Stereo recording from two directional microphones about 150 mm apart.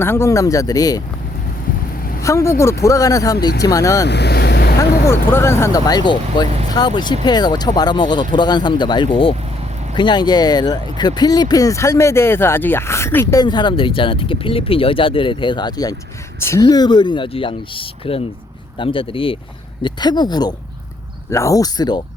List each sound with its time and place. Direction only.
0.0 s speech: 15° left (ahead or behind)
2.2 s speech: 20° left (ahead or behind)
4.0 s vehicle: 90° left
4.8 s speech: 15° left (ahead or behind)
13.4 s speech: 30° left (ahead or behind)